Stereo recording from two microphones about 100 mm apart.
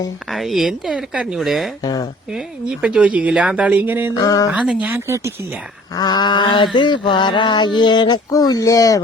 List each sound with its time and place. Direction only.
0.3 s speech: centre (ahead or behind)
1.8 s a sound: 40° left (ahead or behind)
2.3 s speech: 10° right (ahead or behind)
4.1 s a sound: 35° left (ahead or behind)
4.5 s speech: 10° right (ahead or behind); by 5.3 s 30° right (ahead or behind)
5.9 s speech: 40° left (ahead or behind)